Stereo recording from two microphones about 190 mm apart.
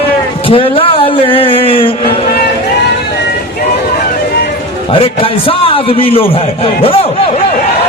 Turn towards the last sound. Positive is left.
turn(degrees=30)  # may be behind; listen again after turning